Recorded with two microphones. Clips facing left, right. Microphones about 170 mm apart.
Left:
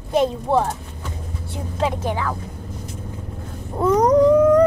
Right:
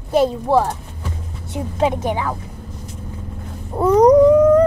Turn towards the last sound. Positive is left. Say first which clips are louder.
# right 2 dB
turn(degrees=-5)  # may be behind; listen again after turning